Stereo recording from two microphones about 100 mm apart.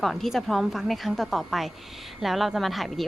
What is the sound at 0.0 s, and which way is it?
Speech, centre (ahead or behind).